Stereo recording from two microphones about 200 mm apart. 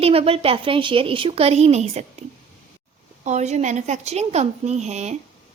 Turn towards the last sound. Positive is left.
turn(degrees=-35)  # may be behind; listen again after turning